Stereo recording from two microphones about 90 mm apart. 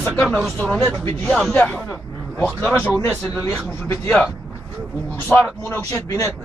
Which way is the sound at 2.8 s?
20° left (ahead or behind).